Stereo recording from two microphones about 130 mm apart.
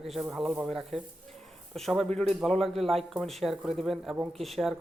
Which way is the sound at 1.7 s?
Centre (ahead or behind).